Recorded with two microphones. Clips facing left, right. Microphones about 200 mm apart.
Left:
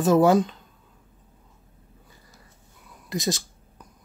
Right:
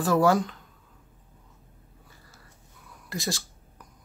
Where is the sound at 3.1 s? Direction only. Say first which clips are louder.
Left 5 dB; 20° left (ahead or behind).